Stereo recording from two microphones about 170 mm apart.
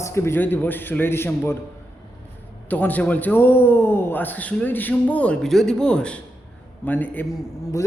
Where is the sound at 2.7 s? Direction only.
10° left (ahead or behind).